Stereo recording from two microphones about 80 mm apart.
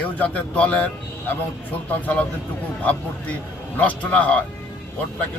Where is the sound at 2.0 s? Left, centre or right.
Centre.